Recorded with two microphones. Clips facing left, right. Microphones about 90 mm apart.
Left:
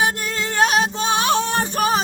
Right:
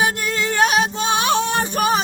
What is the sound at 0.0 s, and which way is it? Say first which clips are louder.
Music: right 1 dB; 35° left (ahead or behind).